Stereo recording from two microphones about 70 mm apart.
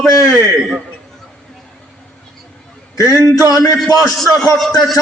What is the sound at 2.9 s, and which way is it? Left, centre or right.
A man's voice, left.